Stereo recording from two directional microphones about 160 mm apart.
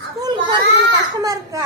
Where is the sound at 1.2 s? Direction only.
20° right (ahead or behind).